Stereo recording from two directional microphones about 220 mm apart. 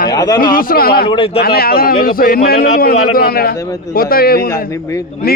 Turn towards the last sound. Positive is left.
turn(degrees=45)  # may be behind; listen again after turning